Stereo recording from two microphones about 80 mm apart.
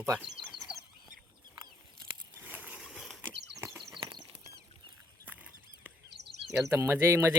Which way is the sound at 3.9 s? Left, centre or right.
Right.